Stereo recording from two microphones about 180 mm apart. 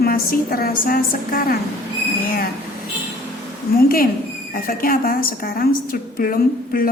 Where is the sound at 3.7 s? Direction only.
55° left (ahead or behind).